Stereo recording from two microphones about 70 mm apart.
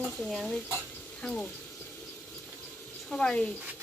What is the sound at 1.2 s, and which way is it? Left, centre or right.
Speech, centre.